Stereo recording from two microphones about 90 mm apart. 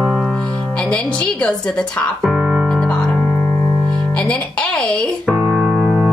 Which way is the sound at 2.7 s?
5° left (ahead or behind).